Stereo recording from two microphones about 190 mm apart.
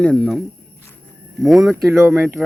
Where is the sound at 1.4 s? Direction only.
Centre (ahead or behind).